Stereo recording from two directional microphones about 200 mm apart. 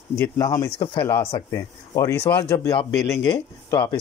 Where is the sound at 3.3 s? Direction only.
25° left (ahead or behind).